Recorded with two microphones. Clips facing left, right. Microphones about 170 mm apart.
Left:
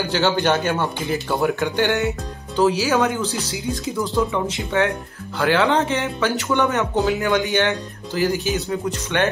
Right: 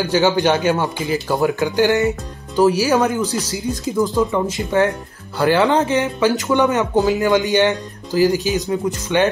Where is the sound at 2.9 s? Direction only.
10° right (ahead or behind).